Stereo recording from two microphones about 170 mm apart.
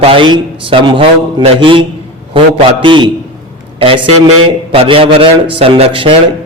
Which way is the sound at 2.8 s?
30° right (ahead or behind).